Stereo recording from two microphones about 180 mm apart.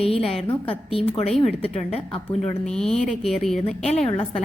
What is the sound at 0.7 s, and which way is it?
Speech, 30° left (ahead or behind).